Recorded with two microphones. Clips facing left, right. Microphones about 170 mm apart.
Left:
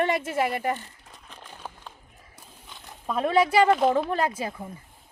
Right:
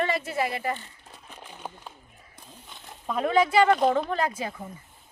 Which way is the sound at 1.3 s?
10° right (ahead or behind).